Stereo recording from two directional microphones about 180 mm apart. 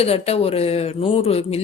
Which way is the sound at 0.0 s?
35° left (ahead or behind).